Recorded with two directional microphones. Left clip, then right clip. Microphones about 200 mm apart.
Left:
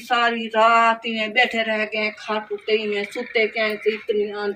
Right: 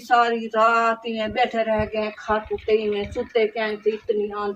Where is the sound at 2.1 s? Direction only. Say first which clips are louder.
Right 2 dB; 40° left (ahead or behind).